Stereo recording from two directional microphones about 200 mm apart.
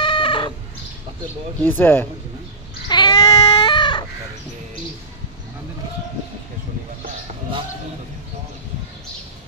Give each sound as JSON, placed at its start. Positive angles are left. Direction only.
{"t": 0.0, "sound": "bird", "side_deg": 25}
{"t": 1.6, "sound": "speech", "side_deg": 10}
{"t": 2.9, "sound": "baby cry", "side_deg": 20}